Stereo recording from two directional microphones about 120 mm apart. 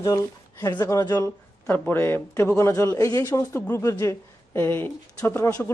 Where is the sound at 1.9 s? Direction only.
20° left (ahead or behind).